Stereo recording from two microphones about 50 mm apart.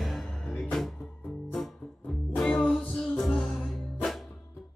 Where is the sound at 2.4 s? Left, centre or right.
Centre.